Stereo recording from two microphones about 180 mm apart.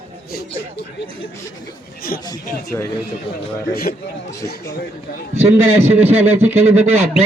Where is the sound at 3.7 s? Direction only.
55° left (ahead or behind).